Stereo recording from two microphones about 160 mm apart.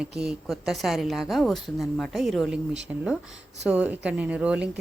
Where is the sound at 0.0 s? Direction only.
5° right (ahead or behind).